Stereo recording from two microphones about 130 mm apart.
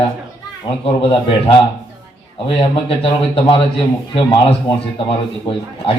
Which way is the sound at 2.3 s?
45° left (ahead or behind).